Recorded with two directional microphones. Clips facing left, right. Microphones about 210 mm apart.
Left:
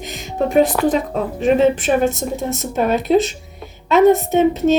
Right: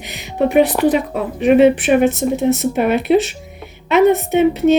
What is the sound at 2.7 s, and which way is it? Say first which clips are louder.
Speech: right 2 dB; 15° right (ahead or behind).